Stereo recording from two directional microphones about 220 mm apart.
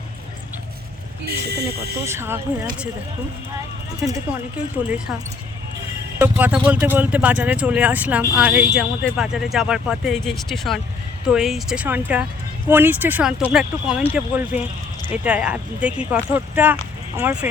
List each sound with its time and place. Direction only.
1.3 s speech: 45° right (ahead or behind)
2.0 s speech: 10° right (ahead or behind)
4.8 s speech: 5° right (ahead or behind)
6.1 s speech: 10° right (ahead or behind)